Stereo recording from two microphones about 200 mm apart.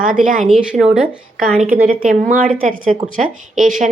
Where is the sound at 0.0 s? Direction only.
40° right (ahead or behind).